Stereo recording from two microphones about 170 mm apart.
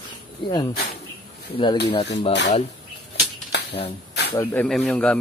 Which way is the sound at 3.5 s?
80° left.